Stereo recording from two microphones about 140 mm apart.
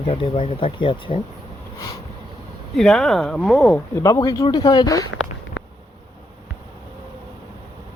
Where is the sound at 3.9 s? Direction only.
25° left (ahead or behind).